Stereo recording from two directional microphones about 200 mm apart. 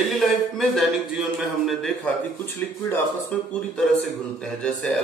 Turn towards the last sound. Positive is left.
turn(degrees=5)  # may be behind; listen again after turning